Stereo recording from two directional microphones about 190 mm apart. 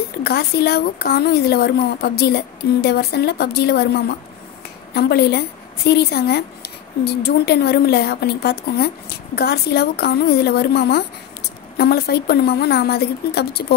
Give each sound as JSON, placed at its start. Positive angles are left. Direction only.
{"t": 0.2, "sound": "speech", "side_deg": 55}